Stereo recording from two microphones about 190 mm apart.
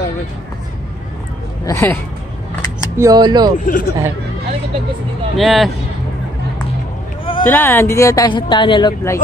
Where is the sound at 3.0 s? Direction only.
20° right (ahead or behind).